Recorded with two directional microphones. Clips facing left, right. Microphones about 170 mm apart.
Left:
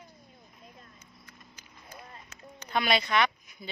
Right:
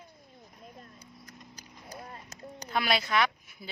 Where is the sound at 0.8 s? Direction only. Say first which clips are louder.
Right 4 dB; 40° right (ahead or behind).